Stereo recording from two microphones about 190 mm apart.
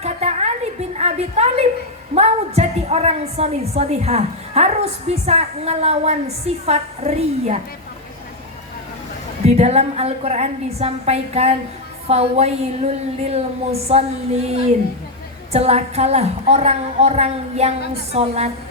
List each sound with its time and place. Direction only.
0.0 s a sound: 35° right (ahead or behind)
2.1 s a woman's voice: 35° right (ahead or behind)
9.5 s a woman's voice: 35° right (ahead or behind)
15.5 s a woman's voice: 35° right (ahead or behind)